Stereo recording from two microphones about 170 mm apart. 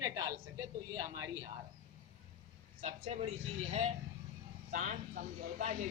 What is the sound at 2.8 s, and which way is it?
Speech, 35° right (ahead or behind).